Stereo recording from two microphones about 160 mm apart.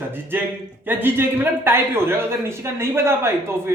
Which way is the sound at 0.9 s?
10° right (ahead or behind).